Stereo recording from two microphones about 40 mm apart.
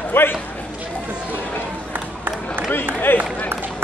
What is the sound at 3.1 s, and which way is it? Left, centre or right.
Speech, left.